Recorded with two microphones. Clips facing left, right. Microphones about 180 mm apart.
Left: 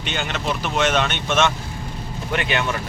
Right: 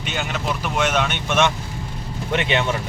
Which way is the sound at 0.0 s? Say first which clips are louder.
Even; 5° right (ahead or behind).